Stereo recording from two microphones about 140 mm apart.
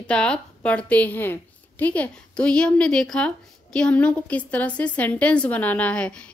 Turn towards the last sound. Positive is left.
turn(degrees=10)  # may be behind; listen again after turning